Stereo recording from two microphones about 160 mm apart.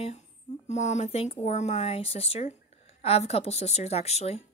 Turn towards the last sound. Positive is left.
turn(degrees=40)  # may be behind; listen again after turning